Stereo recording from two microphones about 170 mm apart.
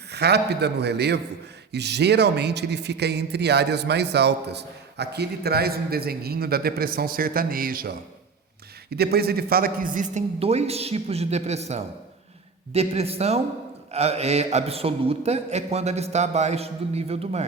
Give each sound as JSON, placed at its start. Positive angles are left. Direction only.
{"t": 0.1, "sound": "a man's voice", "side_deg": -75}
{"t": 8.9, "sound": "a man's voice", "side_deg": -70}